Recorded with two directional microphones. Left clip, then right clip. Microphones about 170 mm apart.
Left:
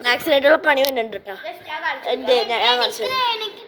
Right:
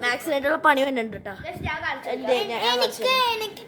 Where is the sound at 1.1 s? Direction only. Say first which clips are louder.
Left 4 dB; 30° left (ahead or behind).